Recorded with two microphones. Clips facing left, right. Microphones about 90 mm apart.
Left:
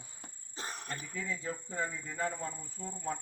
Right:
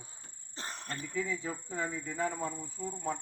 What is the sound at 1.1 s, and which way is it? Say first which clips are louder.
Speech: right 4 dB; 10° right (ahead or behind).